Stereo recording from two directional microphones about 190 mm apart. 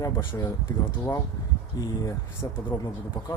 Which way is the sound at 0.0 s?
25° left (ahead or behind).